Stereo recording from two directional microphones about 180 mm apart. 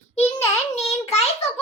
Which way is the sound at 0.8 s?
35° left (ahead or behind).